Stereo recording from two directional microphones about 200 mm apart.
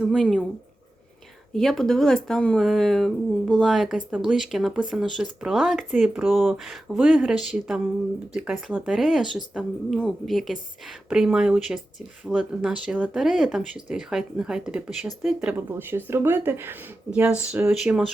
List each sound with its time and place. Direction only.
0.0 s speech: centre (ahead or behind)
1.5 s speech: centre (ahead or behind)